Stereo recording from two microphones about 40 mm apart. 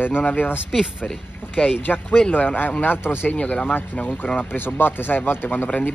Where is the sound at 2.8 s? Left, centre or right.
Left.